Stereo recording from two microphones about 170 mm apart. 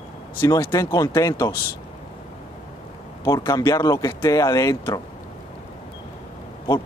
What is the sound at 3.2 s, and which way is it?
Speech, 20° left (ahead or behind).